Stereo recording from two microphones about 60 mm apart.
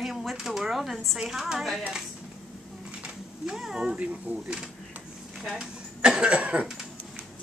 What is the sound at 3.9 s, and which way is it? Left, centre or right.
A woman's voice, centre.